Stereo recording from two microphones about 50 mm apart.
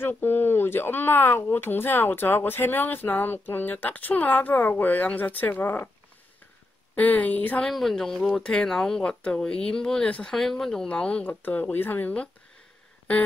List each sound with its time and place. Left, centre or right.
0.2 s speech: left
7.0 s speech: left
7.9 s speech: centre
10.0 s speech: left
10.3 s speech: centre
10.9 s speech: left
11.7 s speech: left